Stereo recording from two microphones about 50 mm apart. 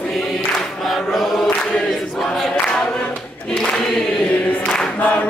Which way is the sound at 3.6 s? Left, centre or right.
Centre.